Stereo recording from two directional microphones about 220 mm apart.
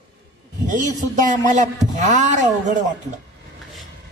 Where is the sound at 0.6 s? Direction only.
35° right (ahead or behind).